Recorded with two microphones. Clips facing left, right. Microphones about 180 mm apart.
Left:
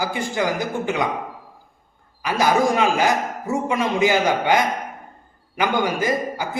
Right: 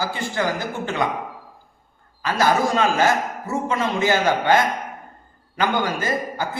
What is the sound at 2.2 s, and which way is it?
A man's voice, 15° left (ahead or behind).